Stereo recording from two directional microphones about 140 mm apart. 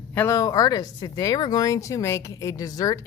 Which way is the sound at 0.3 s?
25° left (ahead or behind).